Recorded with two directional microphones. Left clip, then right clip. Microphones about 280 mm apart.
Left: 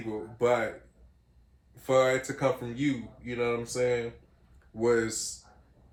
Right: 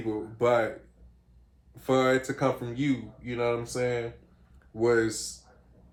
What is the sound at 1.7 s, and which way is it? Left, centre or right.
Speech, centre.